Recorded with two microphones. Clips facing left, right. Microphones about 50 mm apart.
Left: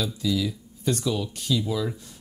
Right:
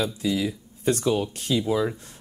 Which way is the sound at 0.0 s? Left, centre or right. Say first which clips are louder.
Right 1 dB; right.